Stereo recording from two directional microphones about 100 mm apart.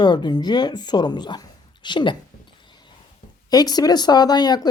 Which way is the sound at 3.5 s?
40° left (ahead or behind).